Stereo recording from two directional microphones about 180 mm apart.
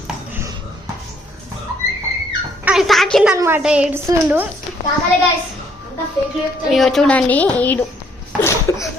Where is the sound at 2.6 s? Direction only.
5° right (ahead or behind).